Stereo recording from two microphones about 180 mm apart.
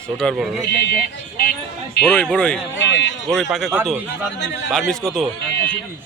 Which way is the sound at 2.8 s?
85° left.